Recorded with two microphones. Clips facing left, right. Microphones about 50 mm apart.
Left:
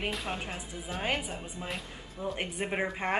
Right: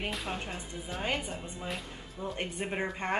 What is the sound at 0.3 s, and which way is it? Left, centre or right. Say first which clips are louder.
A woman's voice: left 1 dB; centre.